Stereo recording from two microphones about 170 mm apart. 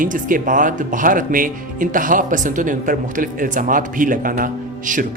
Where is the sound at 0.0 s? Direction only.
50° right (ahead or behind).